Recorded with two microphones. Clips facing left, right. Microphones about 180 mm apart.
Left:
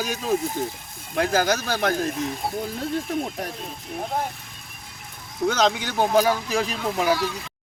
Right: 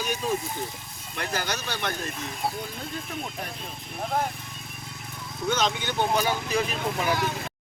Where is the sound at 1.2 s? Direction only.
90° left.